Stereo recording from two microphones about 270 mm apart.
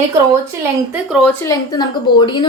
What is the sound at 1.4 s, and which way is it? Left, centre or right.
A woman's voice, centre.